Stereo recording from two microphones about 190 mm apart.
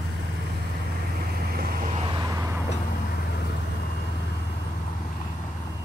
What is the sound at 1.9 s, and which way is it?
Vehicle, 25° right (ahead or behind).